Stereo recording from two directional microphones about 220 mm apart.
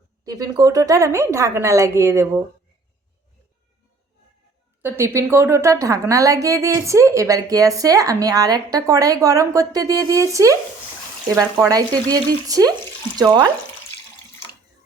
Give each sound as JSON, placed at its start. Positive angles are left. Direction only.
{"t": 0.3, "sound": "a woman's voice", "side_deg": -15}
{"t": 4.8, "sound": "a woman's voice", "side_deg": -10}